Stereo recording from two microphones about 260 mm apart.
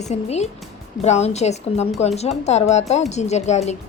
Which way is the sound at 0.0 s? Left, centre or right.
Left.